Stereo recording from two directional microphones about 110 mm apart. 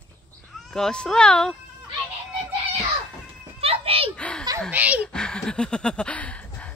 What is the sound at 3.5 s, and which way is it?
Children playing, 60° right (ahead or behind).